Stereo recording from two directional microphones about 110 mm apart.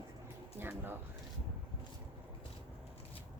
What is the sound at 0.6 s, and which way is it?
Speech, 20° right (ahead or behind).